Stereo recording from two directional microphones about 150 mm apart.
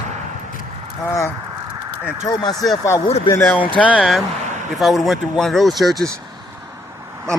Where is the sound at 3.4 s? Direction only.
10° left (ahead or behind).